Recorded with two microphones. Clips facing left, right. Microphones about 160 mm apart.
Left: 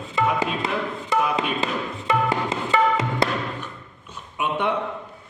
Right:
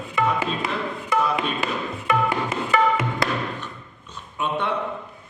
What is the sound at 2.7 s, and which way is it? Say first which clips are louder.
Music: even; 25° left (ahead or behind).